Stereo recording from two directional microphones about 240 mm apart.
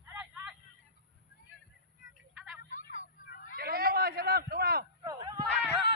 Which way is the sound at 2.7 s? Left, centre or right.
Left.